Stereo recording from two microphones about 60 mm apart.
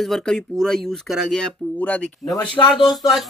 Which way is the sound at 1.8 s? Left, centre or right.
Left.